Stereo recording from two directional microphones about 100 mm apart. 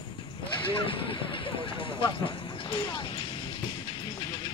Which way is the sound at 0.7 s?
60° left (ahead or behind).